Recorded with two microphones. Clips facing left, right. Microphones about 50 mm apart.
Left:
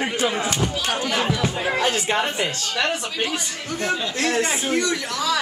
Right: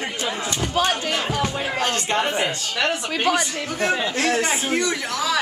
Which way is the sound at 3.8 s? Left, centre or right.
Centre.